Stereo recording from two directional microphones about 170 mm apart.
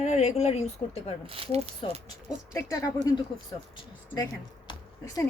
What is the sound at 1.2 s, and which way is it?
Speech, 35° right (ahead or behind).